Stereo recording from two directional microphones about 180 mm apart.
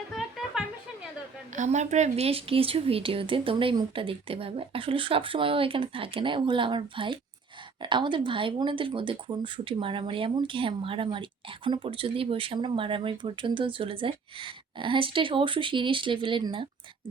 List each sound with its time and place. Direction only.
0.1 s music: centre (ahead or behind)
1.5 s speech: 40° right (ahead or behind)